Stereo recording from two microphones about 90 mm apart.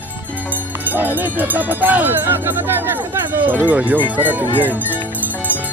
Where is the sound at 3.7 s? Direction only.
20° right (ahead or behind).